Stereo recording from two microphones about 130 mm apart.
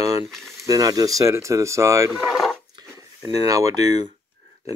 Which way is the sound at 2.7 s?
30° right (ahead or behind).